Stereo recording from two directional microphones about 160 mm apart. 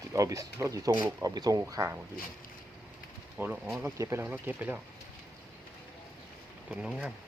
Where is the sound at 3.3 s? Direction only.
5° right (ahead or behind).